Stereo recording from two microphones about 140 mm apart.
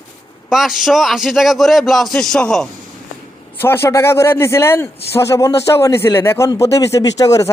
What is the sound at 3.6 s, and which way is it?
A man's voice, 15° left (ahead or behind).